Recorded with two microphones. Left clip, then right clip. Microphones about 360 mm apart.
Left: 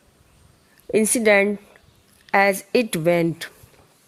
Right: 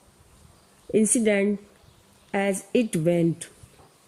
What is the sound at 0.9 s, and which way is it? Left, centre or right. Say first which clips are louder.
Speech: left 3 dB; left.